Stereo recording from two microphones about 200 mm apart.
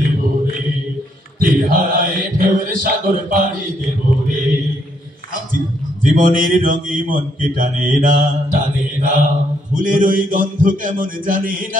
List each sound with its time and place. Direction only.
1.4 s speech: 45° right (ahead or behind)
6.0 s speech: 40° right (ahead or behind)
9.0 s mantra: 40° right (ahead or behind)
9.8 s speech: 40° right (ahead or behind)